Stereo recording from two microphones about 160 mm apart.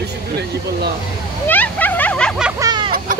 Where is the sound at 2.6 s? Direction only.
25° right (ahead or behind).